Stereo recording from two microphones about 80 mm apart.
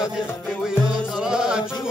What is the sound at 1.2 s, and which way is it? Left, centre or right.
Music, centre.